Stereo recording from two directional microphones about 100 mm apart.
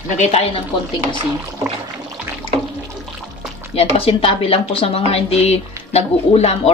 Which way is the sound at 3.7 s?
80° left.